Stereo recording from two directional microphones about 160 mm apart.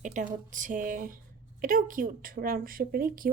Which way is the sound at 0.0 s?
55° right (ahead or behind).